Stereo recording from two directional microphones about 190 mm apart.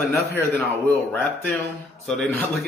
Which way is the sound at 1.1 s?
10° left (ahead or behind).